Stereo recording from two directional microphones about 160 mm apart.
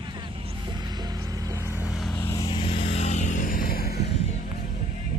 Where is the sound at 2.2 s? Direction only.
20° left (ahead or behind); by 4.2 s 80° left.